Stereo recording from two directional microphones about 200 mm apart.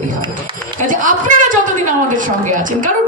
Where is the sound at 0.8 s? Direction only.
40° right (ahead or behind).